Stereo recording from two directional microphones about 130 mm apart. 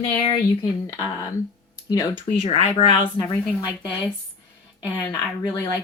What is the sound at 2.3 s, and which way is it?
Speech, 50° left (ahead or behind).